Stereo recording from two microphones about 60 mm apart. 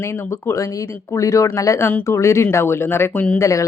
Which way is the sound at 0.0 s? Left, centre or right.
Left.